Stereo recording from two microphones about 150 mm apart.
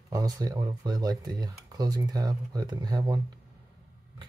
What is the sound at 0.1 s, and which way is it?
Speech, 25° right (ahead or behind).